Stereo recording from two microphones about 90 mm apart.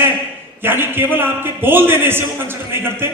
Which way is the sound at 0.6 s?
25° right (ahead or behind).